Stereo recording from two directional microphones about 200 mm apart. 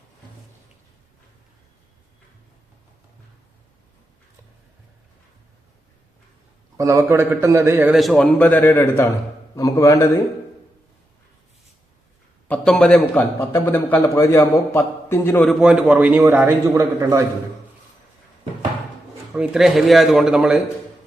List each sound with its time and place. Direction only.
6.7 s a man's voice: 15° right (ahead or behind); by 10.1 s 15° left (ahead or behind)
12.5 s a man's voice: 5° left (ahead or behind)
15.6 s a man's voice: 5° right (ahead or behind)
19.3 s a man's voice: centre (ahead or behind)